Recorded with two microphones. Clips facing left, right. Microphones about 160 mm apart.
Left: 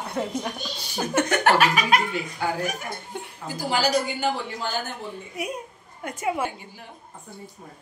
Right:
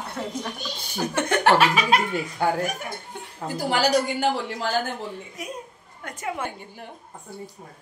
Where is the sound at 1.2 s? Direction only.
30° right (ahead or behind).